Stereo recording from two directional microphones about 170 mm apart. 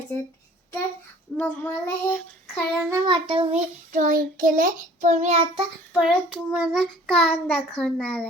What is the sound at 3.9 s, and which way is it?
Child singing, 50° right (ahead or behind).